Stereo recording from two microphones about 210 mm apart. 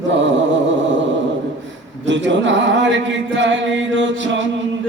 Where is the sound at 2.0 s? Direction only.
60° right (ahead or behind).